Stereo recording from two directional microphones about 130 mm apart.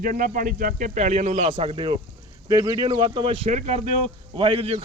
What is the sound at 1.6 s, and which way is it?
Speech, 45° right (ahead or behind).